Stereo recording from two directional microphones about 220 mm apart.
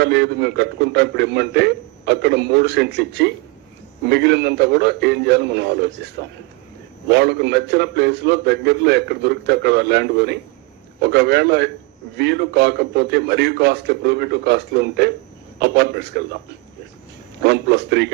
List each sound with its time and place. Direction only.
0.0 s a man's voice: 50° right (ahead or behind)
7.1 s a man's voice: 50° right (ahead or behind)
17.4 s a man's voice: 50° right (ahead or behind)